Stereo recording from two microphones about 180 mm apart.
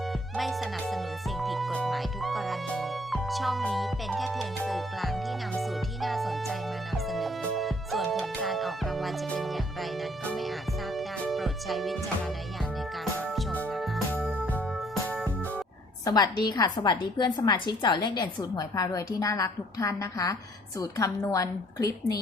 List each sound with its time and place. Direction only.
0.3 s music: centre (ahead or behind)
13.5 s music: 5° left (ahead or behind)
16.0 s a woman's voice: 20° left (ahead or behind)